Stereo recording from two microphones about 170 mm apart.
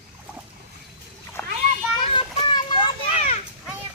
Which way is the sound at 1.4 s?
10° left (ahead or behind).